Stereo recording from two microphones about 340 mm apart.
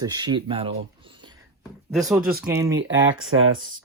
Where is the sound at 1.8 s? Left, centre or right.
Centre.